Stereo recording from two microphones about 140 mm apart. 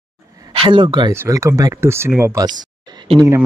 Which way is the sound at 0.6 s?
35° right (ahead or behind).